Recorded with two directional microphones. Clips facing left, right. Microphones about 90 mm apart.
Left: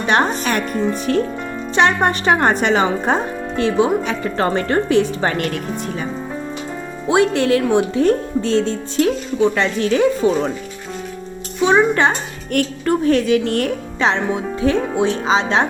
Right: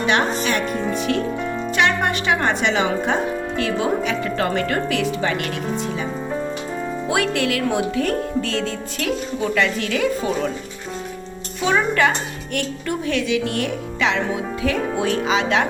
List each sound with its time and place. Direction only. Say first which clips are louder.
0.0 s speech: left 2 dB; 40° left (ahead or behind)
0.7 s speech: left 4 dB; centre (ahead or behind)
0.9 s speech: left 2 dB; 40° left (ahead or behind)
7.1 s speech: left 7 dB; 30° left (ahead or behind)
11.6 s music: left 4 dB; 25° left (ahead or behind)
12.5 s speech: left 7 dB; 40° left (ahead or behind)